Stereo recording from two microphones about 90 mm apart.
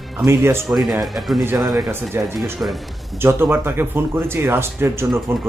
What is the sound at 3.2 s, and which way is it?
A man's voice, 25° right (ahead or behind).